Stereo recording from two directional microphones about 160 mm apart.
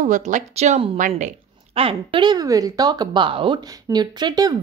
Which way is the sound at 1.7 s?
35° right (ahead or behind).